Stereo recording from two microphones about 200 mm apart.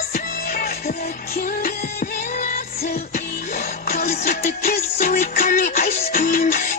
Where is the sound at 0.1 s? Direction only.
45° left (ahead or behind).